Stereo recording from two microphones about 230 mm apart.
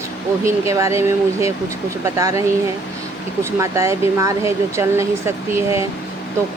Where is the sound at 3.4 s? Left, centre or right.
Centre.